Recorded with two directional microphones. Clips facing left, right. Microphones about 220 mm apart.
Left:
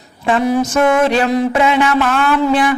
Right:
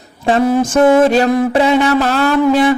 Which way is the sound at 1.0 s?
40° right (ahead or behind).